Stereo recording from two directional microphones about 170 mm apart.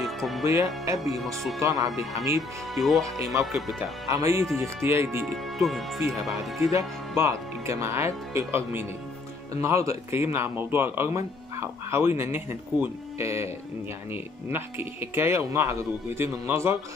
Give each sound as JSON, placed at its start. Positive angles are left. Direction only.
{"t": 0.0, "sound": "music", "side_deg": 0}
{"t": 0.5, "sound": "speech", "side_deg": -20}
{"t": 0.9, "sound": "speech", "side_deg": 0}
{"t": 1.6, "sound": "speech", "side_deg": -20}
{"t": 2.7, "sound": "speech", "side_deg": 0}
{"t": 4.1, "sound": "speech", "side_deg": -20}
{"t": 5.2, "sound": "speech", "side_deg": 0}
{"t": 5.9, "sound": "speech", "side_deg": -20}